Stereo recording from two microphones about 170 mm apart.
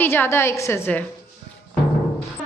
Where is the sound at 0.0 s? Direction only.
15° left (ahead or behind).